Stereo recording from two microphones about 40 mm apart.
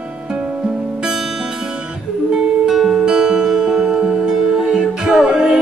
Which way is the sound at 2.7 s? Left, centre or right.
Centre.